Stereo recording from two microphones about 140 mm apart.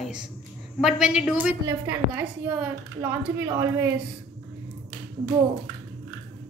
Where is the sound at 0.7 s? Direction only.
5° right (ahead or behind); by 3.9 s 20° right (ahead or behind).